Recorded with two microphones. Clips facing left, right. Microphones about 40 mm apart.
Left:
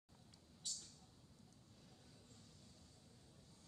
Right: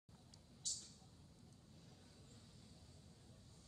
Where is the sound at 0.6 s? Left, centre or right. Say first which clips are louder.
Even; centre.